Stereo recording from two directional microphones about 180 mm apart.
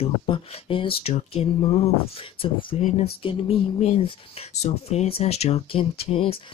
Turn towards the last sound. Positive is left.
turn(degrees=30)  # may be behind; listen again after turning